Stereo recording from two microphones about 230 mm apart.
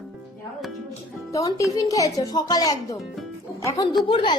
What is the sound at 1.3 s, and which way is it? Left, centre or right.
A woman's voice, centre.